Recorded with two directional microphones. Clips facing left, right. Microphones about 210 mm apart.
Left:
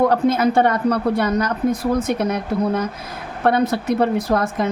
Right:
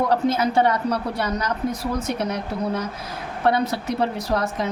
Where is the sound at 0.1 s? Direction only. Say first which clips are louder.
Left 4 dB; 55° left (ahead or behind).